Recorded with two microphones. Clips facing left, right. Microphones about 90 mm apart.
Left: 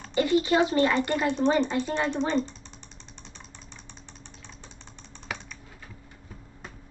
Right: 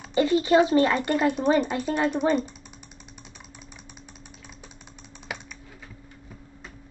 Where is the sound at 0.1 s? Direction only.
25° right (ahead or behind).